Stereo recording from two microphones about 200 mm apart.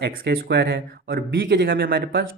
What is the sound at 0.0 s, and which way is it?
Speech, 55° right (ahead or behind).